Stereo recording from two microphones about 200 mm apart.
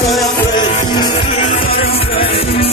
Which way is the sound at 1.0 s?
25° left (ahead or behind).